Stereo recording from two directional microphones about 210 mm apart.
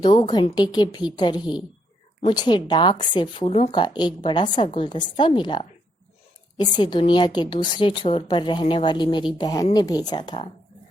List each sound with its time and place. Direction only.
0.0 s speech: 20° left (ahead or behind)